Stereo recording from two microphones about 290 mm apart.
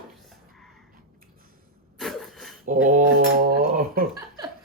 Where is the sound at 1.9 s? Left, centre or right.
Centre.